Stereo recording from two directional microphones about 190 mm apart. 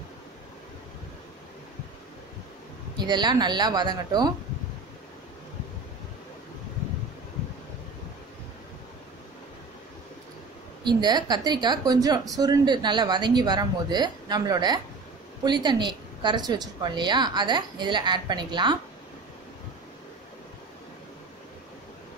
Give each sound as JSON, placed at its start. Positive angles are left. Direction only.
{"t": 3.0, "sound": "speech", "side_deg": -20}
{"t": 10.8, "sound": "speech", "side_deg": -25}